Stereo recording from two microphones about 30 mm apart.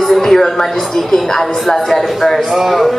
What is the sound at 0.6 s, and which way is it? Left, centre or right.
A woman's voice, centre.